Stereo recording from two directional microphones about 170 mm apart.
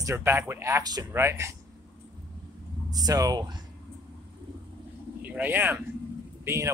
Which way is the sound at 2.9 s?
20° right (ahead or behind).